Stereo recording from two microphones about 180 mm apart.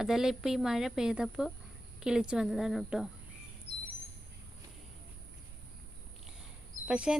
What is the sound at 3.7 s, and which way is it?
Bird vocalization, 60° right (ahead or behind).